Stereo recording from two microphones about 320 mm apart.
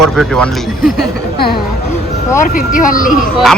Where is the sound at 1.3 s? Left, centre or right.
Left.